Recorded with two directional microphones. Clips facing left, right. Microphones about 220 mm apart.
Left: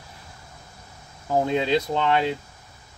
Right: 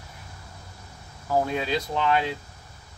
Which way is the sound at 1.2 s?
20° left (ahead or behind).